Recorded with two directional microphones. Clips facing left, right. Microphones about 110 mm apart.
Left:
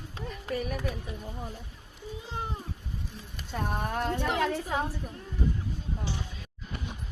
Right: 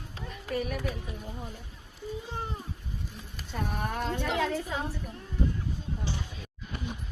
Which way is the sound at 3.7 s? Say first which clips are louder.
Left 2 dB; 60° left (ahead or behind).